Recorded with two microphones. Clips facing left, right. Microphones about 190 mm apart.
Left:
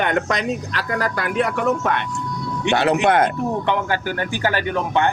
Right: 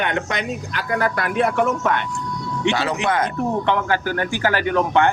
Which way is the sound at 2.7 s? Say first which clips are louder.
Left 5 dB; 55° left (ahead or behind).